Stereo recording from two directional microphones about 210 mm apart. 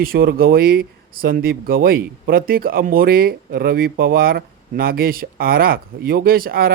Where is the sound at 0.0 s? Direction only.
45° right (ahead or behind).